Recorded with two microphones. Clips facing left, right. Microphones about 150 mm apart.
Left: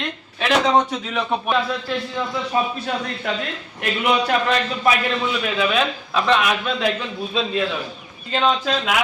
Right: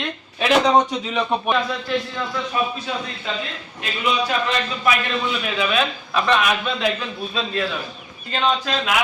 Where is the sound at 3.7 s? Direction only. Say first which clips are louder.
Left 3 dB; 60° left (ahead or behind).